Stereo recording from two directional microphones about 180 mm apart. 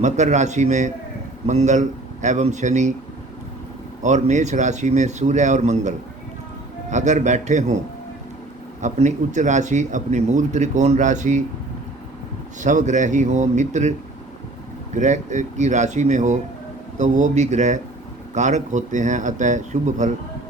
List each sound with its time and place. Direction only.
0.0 s speech: 40° right (ahead or behind)
4.0 s speech: 40° right (ahead or behind)
6.9 s speech: 40° right (ahead or behind)
8.8 s speech: 40° right (ahead or behind)
12.6 s speech: 45° right (ahead or behind)
14.9 s speech: 45° right (ahead or behind)